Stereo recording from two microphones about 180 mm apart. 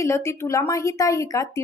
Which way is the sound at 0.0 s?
15° left (ahead or behind).